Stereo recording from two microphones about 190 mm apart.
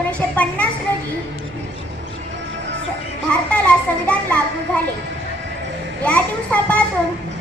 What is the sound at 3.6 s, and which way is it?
Speech, 5° left (ahead or behind).